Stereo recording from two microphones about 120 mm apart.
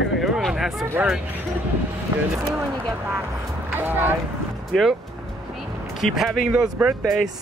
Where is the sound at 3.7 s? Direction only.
15° right (ahead or behind).